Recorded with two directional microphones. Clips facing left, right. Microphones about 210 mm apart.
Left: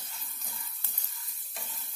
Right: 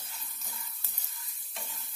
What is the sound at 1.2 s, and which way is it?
Stir, centre (ahead or behind).